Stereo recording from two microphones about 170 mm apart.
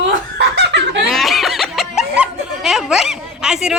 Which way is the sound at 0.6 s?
90° right.